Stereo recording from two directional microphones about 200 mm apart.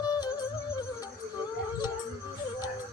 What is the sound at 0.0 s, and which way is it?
Music, 20° left (ahead or behind).